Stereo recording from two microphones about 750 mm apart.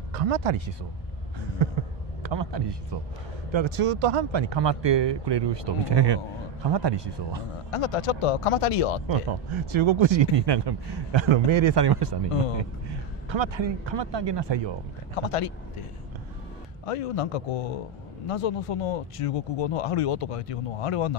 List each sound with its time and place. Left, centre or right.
0.1 s speech: right
2.2 s a man's voice: right
7.7 s speech: left
9.0 s speech: right
13.3 s speech: right
16.8 s speech: left